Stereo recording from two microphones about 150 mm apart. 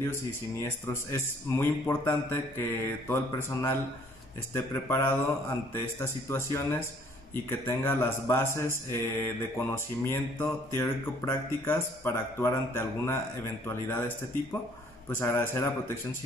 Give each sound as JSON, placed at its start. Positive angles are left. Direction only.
{"t": 0.0, "sound": "speech", "side_deg": 15}
{"t": 4.8, "sound": "speech", "side_deg": 15}